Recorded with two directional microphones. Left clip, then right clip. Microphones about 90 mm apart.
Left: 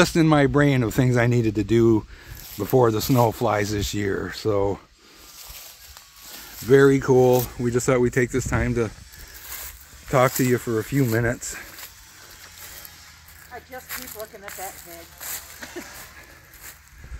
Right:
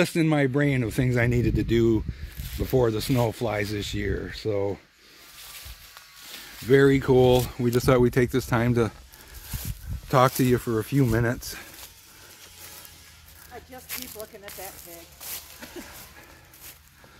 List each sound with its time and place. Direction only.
0.0 s speech: 60° left (ahead or behind)
1.1 s speech: 30° left (ahead or behind); by 4.8 s 80° left
6.6 s speech: 5° left (ahead or behind)
7.4 s speech: 35° right (ahead or behind)
7.7 s speech: 60° right (ahead or behind)
10.4 s speech: 10° right (ahead or behind)
10.9 s speech: 20° right (ahead or behind)